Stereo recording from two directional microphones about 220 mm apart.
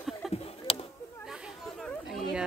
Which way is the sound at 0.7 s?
25° left (ahead or behind).